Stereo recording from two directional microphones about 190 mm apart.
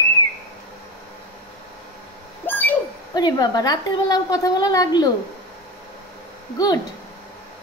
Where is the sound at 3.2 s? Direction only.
20° left (ahead or behind).